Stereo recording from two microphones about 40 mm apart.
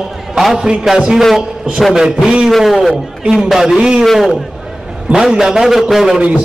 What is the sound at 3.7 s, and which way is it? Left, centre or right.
Speech, right.